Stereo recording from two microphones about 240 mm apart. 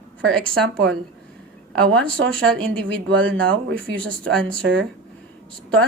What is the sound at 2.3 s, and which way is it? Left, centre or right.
Speech, centre.